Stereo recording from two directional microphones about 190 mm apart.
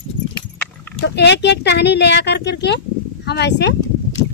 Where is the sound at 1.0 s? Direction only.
65° left (ahead or behind).